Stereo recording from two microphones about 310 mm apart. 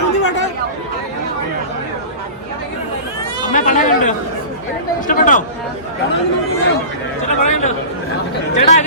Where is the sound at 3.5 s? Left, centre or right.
Left.